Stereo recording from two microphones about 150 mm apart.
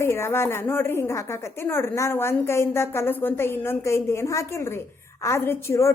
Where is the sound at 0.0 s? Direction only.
15° left (ahead or behind).